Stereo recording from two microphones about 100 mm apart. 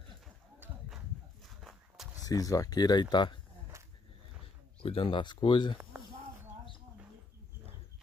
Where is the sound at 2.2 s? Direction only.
35° left (ahead or behind).